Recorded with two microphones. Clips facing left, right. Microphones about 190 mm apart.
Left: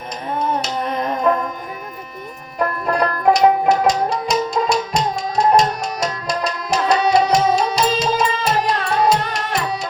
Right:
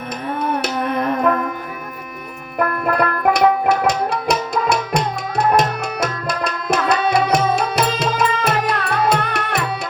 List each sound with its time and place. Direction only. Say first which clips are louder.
0.3 s music: even; 55° right (ahead or behind)
2.6 s music: right 1 dB; 55° right (ahead or behind)
4.7 s tabla: even; 55° right (ahead or behind)
9.0 s music: left 1 dB; 60° right (ahead or behind)